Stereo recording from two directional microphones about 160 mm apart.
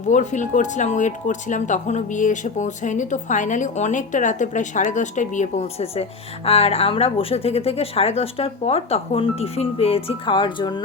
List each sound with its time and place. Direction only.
0.1 s speech: 50° left (ahead or behind); by 10.8 s 30° left (ahead or behind)